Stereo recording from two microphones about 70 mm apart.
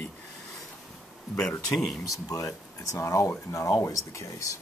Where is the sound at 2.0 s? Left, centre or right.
Left.